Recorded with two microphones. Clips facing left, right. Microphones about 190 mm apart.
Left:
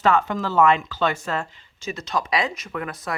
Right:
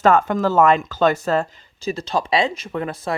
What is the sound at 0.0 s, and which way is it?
Speech, 45° right (ahead or behind).